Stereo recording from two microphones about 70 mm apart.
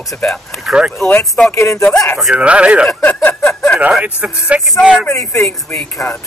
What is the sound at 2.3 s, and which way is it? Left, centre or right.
Speech, centre.